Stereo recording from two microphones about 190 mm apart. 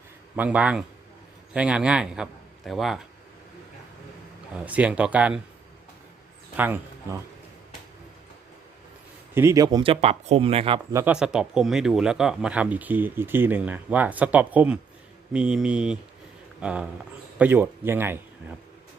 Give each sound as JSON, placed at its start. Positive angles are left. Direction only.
{"t": 0.3, "sound": "a man's voice", "side_deg": -5}
{"t": 4.5, "sound": "speech", "side_deg": -5}
{"t": 6.6, "sound": "speech", "side_deg": -10}
{"t": 9.3, "sound": "speech", "side_deg": -15}
{"t": 10.9, "sound": "a man's voice", "side_deg": -5}